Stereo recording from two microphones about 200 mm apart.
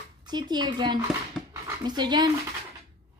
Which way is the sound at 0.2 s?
20° right (ahead or behind).